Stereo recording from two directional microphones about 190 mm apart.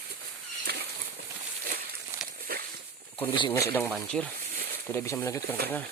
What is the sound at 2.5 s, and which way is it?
Walk, 50° right (ahead or behind).